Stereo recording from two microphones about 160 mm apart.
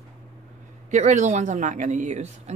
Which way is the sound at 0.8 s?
50° right (ahead or behind).